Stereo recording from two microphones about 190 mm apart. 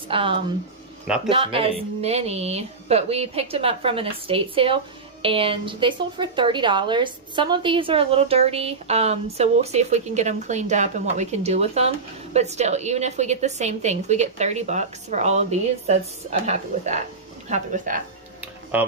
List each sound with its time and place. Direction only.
0.1 s speech: 30° right (ahead or behind)
1.0 s a man's voice: 5° right (ahead or behind)
1.3 s a woman's voice: 30° right (ahead or behind)
18.4 s music: 10° right (ahead or behind)